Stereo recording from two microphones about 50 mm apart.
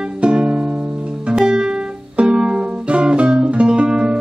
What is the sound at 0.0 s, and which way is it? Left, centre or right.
Music, centre.